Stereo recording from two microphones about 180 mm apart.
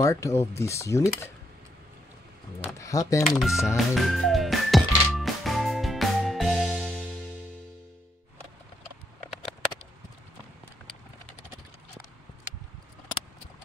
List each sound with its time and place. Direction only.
0.0 s speech: 15° left (ahead or behind)
2.6 s speech: 20° left (ahead or behind)
3.3 s music: centre (ahead or behind)